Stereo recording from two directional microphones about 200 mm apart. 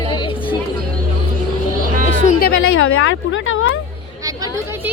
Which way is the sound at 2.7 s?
90° left.